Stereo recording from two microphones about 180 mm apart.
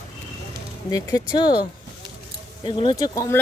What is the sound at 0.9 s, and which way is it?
Speech, 20° left (ahead or behind).